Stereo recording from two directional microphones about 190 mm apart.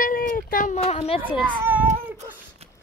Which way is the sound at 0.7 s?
30° left (ahead or behind).